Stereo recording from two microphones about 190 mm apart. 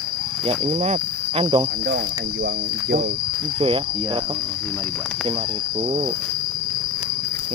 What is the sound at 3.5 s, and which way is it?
Cricket, 25° right (ahead or behind).